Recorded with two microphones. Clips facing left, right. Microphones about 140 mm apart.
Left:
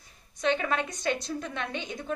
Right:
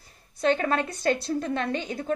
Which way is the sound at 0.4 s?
40° right (ahead or behind).